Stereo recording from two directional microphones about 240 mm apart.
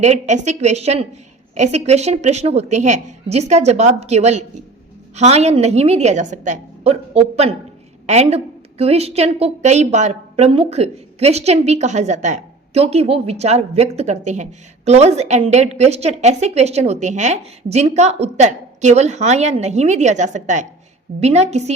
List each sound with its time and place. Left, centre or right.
0.0 s a woman's voice: right